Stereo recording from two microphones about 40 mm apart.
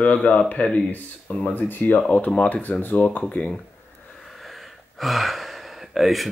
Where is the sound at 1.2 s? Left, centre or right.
Left.